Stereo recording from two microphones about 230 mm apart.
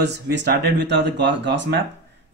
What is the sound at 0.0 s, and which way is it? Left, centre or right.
A man's voice, right.